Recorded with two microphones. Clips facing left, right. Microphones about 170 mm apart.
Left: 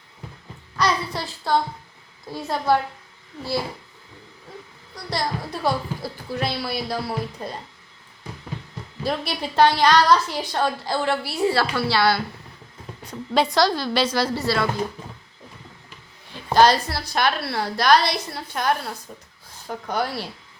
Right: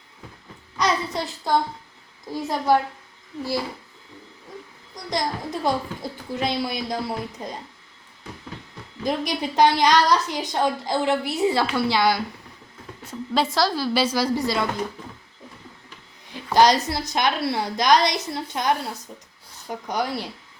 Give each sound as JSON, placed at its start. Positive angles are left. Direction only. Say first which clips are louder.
{"t": 0.8, "sound": "a child's voice", "louder": "even", "side_deg": -20}
{"t": 5.1, "sound": "a woman's voice", "louder": "right 1 dB", "side_deg": -20}
{"t": 9.0, "sound": "a woman's voice", "louder": "right 2 dB", "side_deg": -15}
{"t": 13.1, "sound": "a woman's voice", "louder": "left 2 dB", "side_deg": 0}
{"t": 16.6, "sound": "a woman's voice", "louder": "even", "side_deg": -20}